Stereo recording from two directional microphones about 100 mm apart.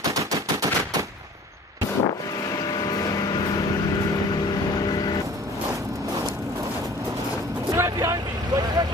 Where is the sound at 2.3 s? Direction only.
35° left (ahead or behind).